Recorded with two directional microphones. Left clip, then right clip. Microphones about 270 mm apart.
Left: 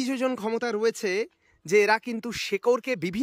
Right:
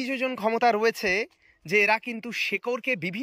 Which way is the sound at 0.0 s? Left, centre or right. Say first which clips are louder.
Right 1 dB; centre.